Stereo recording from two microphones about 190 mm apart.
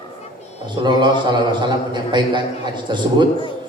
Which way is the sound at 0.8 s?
25° right (ahead or behind).